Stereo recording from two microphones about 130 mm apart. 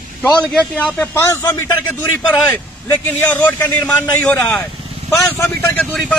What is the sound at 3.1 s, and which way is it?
A man's voice, 15° left (ahead or behind).